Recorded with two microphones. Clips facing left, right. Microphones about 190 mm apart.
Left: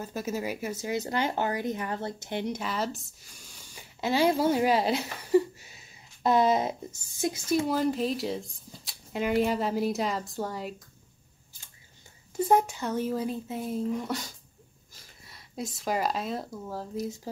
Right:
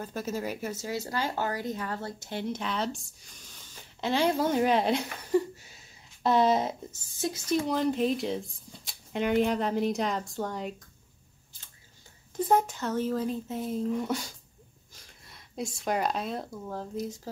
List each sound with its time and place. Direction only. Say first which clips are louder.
0.0 s speech: left 1 dB; 10° left (ahead or behind)
2.6 s speech: even; 5° left (ahead or behind)
12.4 s speech: left 1 dB; 10° left (ahead or behind)
15.2 s speech: right 1 dB; centre (ahead or behind)